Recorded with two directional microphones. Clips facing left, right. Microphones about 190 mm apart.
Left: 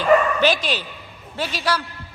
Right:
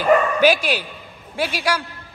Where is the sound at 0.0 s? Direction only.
10° right (ahead or behind).